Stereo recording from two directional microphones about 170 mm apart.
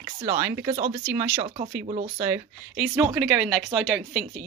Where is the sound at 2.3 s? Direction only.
5° right (ahead or behind).